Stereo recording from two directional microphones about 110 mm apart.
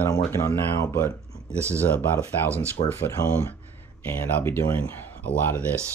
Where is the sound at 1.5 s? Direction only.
25° right (ahead or behind).